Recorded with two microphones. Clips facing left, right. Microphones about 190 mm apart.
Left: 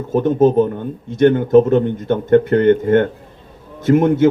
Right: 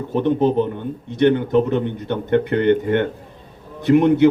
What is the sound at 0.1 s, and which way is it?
A man's voice, 45° left (ahead or behind).